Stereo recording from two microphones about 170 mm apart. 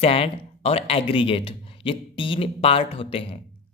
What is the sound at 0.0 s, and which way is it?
Speech, 35° left (ahead or behind).